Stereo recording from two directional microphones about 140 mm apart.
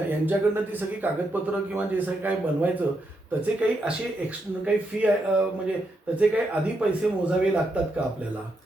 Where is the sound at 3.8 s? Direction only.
10° right (ahead or behind).